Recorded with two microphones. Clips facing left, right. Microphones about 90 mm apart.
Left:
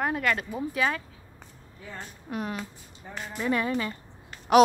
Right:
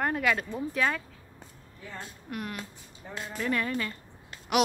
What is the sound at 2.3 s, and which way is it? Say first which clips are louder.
A woman's voice: left 4 dB; 25° left (ahead or behind).